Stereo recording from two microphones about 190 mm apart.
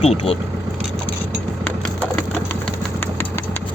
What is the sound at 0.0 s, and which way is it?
Speech, 30° left (ahead or behind).